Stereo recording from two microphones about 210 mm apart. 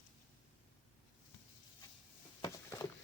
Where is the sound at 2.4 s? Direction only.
15° left (ahead or behind).